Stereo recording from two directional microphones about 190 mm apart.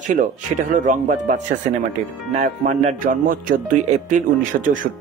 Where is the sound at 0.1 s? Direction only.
40° right (ahead or behind).